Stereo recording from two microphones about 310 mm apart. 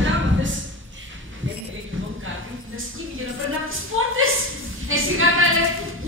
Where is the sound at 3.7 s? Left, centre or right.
Right.